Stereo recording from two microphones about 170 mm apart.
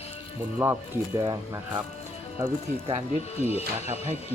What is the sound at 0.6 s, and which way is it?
Speech, 15° right (ahead or behind).